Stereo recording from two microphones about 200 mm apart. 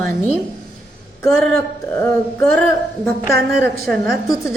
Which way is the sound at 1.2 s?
15° left (ahead or behind).